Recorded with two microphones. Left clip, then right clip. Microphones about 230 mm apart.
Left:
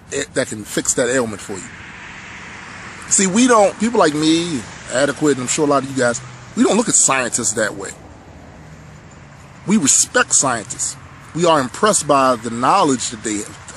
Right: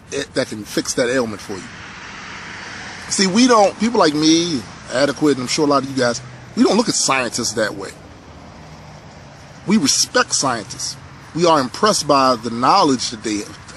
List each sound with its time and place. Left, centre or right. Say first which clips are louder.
0.1 s a man's voice: left 1 dB; centre
1.8 s vehicle: right 1 dB; right
3.2 s a man's voice: even; centre
9.7 s a man's voice: even; centre